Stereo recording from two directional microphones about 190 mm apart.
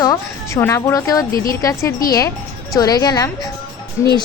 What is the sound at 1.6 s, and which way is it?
A woman's voice, 15° left (ahead or behind).